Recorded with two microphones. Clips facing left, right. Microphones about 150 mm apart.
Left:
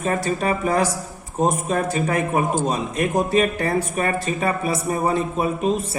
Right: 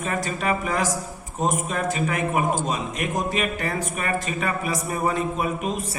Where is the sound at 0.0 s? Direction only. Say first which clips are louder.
Left 4 dB; 35° left (ahead or behind).